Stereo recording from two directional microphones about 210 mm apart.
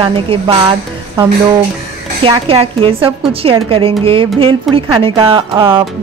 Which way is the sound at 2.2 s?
25° right (ahead or behind).